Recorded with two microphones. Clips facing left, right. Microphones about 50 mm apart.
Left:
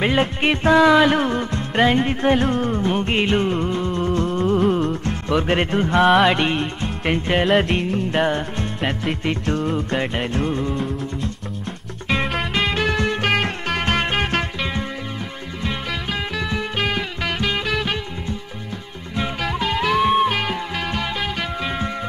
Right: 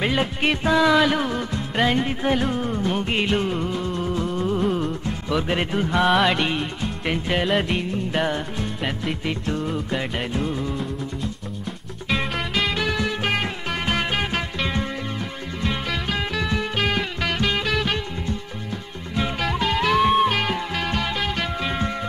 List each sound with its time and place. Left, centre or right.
0.0 s speech: centre
1.8 s music: centre
3.1 s music: centre
5.3 s speech: centre
7.1 s music: centre
8.1 s speech: centre
8.5 s music: centre
9.9 s speech: centre
10.3 s music: centre
15.6 s music: centre
19.1 s music: centre